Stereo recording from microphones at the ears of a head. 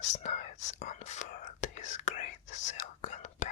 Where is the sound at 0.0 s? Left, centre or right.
Left.